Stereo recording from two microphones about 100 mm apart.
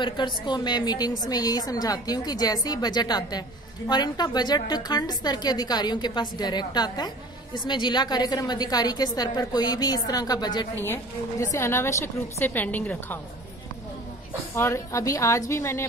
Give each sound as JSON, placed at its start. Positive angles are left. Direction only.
{"t": 0.0, "sound": "a woman's voice", "side_deg": 50}
{"t": 10.8, "sound": "a woman's voice", "side_deg": 25}
{"t": 14.5, "sound": "a woman's voice", "side_deg": 30}